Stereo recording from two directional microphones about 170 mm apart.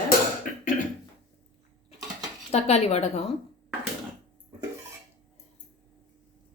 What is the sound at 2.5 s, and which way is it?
Speech, 40° left (ahead or behind).